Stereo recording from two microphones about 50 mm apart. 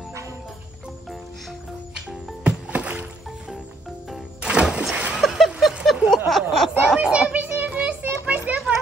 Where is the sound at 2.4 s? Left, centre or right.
Right.